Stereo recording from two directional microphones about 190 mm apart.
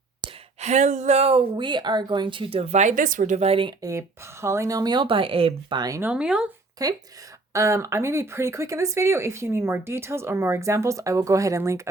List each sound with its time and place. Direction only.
0.2 s speech: 35° right (ahead or behind); by 6.5 s 5° right (ahead or behind)
6.8 s speech: 20° right (ahead or behind)